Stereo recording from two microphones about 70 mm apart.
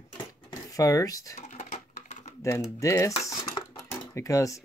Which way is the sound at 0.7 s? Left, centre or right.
Left.